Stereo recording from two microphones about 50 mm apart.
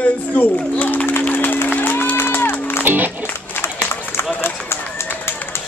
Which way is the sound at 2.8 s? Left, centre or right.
Right.